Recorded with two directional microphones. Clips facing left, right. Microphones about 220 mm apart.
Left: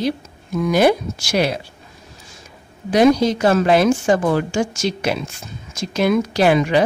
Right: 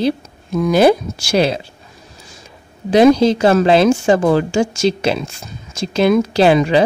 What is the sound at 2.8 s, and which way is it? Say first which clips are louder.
A woman's voice: right 4 dB; 30° right (ahead or behind).